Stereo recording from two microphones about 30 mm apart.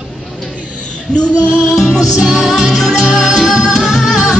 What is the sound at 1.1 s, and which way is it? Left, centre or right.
Music, left.